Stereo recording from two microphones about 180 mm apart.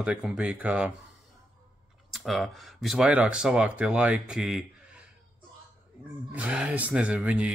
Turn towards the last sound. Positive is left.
turn(degrees=-5)  # may be behind; listen again after turning